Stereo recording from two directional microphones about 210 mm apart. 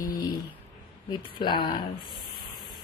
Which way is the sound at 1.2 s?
20° left (ahead or behind).